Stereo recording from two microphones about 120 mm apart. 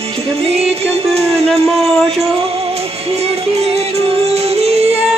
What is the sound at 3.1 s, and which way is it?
Music, 60° right (ahead or behind).